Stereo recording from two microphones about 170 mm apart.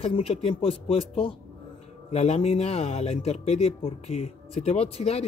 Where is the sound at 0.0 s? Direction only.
35° left (ahead or behind).